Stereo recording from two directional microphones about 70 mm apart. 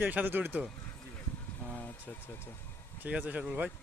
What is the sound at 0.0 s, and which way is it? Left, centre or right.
Speech, right.